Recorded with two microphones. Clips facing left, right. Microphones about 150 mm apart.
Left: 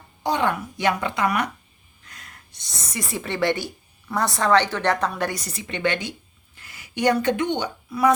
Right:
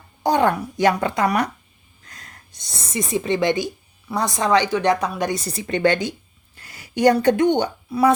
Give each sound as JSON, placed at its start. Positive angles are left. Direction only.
{"t": 0.2, "sound": "speech", "side_deg": -45}
{"t": 2.0, "sound": "a sound", "side_deg": -35}
{"t": 3.0, "sound": "a woman's voice", "side_deg": -20}
{"t": 5.4, "sound": "speech", "side_deg": -35}
{"t": 6.6, "sound": "a sound", "side_deg": -40}
{"t": 7.9, "sound": "speech", "side_deg": -30}